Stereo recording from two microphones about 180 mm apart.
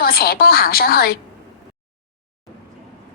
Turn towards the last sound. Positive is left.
turn(degrees=60)  # may be behind; listen again after turning